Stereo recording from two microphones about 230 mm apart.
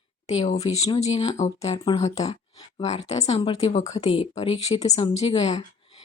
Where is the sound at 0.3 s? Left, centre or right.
Left.